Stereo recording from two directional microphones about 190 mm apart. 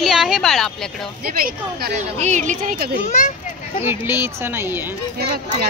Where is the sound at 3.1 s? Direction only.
40° left (ahead or behind).